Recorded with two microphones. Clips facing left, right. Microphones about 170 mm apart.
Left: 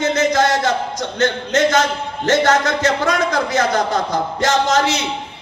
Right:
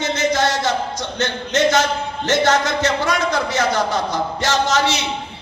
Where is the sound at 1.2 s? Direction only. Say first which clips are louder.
Left 2 dB; 55° left (ahead or behind).